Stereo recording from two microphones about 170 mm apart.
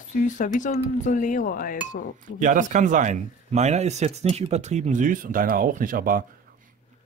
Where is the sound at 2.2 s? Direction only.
50° right (ahead or behind).